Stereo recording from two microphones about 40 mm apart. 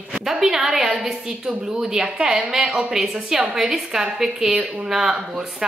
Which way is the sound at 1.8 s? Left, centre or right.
Centre.